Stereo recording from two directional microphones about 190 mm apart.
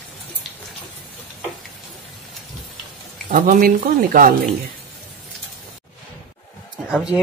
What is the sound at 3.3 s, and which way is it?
Speech, 45° right (ahead or behind).